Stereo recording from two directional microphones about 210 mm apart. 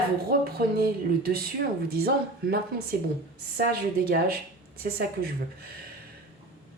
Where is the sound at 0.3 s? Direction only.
45° right (ahead or behind).